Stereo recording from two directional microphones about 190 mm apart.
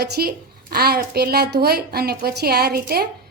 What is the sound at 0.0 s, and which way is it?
A woman's voice, 55° right (ahead or behind).